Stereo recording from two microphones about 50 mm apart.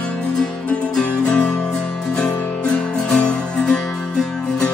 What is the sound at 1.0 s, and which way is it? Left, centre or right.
Music, left.